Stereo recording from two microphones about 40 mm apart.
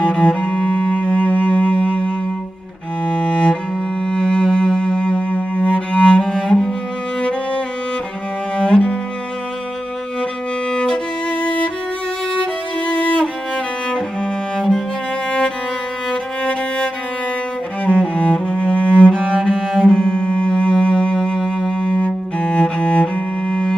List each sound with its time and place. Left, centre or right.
0.0 s cello: left
3.1 s music: left
5.3 s cello: left
6.3 s cello: centre
8.5 s cello: left
10.7 s violin: left
11.4 s music: left
12.8 s music: left
16.1 s music: left
17.8 s cello: left
19.5 s cello: centre
19.9 s music: left
23.5 s music: centre